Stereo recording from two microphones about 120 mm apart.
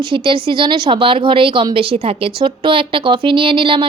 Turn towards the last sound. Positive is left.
turn(degrees=-45)  # may be behind; listen again after turning